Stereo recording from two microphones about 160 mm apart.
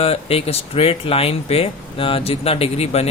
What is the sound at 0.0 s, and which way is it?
Speech, 40° left (ahead or behind).